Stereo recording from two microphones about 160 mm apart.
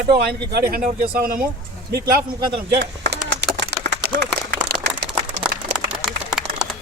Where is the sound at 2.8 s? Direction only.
90° right.